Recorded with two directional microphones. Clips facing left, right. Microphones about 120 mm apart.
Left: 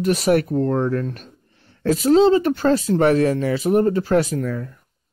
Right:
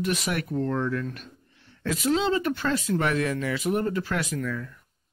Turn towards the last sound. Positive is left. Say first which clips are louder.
# left 6 dB
turn(degrees=40)  # may be behind; listen again after turning